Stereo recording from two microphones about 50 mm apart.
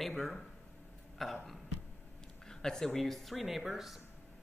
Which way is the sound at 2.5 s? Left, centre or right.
Centre.